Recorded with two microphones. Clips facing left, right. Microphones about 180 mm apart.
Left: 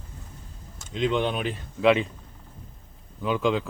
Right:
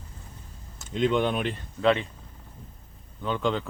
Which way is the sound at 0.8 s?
Centre (ahead or behind).